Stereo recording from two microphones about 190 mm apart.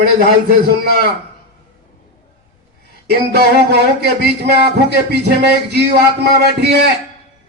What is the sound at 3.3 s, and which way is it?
Speech, 55° right (ahead or behind).